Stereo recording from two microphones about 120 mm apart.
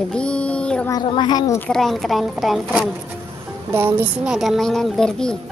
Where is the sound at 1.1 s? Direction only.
40° left (ahead or behind).